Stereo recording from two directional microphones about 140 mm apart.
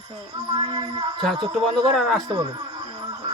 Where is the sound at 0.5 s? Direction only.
35° right (ahead or behind).